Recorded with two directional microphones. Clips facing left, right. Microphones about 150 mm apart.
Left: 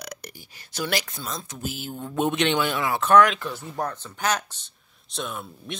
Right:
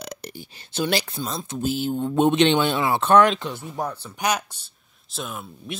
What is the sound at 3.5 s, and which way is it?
Speech, 15° right (ahead or behind).